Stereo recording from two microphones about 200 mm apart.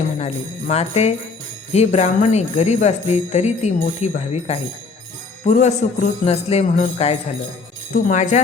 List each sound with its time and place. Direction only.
0.2 s speech: 30° left (ahead or behind)